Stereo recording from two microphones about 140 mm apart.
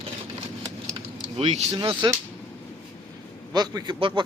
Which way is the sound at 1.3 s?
50° right (ahead or behind).